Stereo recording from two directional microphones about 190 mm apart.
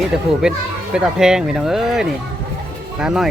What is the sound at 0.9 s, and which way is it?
Speech, 5° right (ahead or behind).